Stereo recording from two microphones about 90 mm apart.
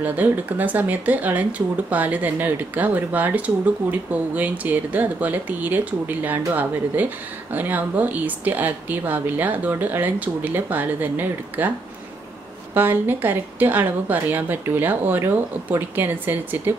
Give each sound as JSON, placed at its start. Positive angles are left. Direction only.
{"t": 0.0, "sound": "speech", "side_deg": -20}
{"t": 12.7, "sound": "speech", "side_deg": -20}